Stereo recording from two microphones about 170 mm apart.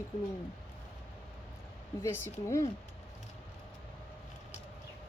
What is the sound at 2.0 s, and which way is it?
Speech, 15° left (ahead or behind).